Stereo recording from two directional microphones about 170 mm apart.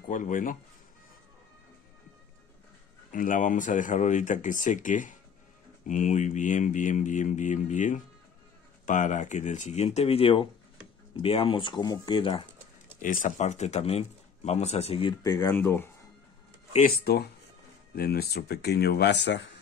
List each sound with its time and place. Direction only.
0.1 s speech: 50° left (ahead or behind)
3.1 s speech: 50° left (ahead or behind); by 12.4 s 30° left (ahead or behind)
13.0 s speech: 50° left (ahead or behind); by 15.1 s 35° left (ahead or behind)
15.2 s speech: 15° left (ahead or behind)
17.0 s speech: 70° left (ahead or behind); by 19.5 s 90° left